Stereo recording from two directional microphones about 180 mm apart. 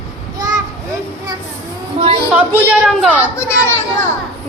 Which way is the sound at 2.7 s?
5° right (ahead or behind).